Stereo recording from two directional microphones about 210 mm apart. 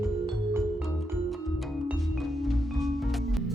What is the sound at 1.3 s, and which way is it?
Music, centre (ahead or behind).